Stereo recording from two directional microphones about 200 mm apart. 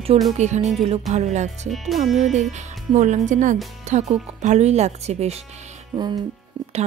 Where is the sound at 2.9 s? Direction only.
35° right (ahead or behind).